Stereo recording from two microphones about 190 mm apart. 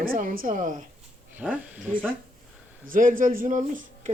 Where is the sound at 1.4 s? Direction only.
5° right (ahead or behind).